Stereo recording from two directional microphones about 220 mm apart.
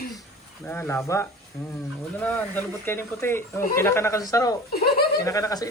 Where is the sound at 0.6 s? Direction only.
10° left (ahead or behind).